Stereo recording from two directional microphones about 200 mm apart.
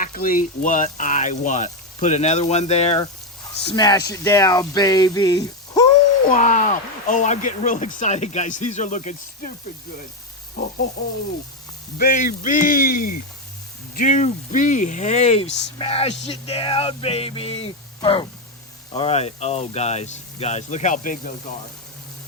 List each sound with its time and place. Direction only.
0.0 s speech: 45° left (ahead or behind)
3.7 s a sound: 20° left (ahead or behind)
6.3 s speech: 40° left (ahead or behind)
10.6 s speech: 45° left (ahead or behind)
11.9 s speech: 45° left (ahead or behind)
15.8 s a sound: 30° left (ahead or behind)
18.9 s speech: 30° left (ahead or behind)